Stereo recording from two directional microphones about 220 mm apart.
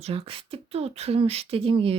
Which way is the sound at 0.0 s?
25° right (ahead or behind).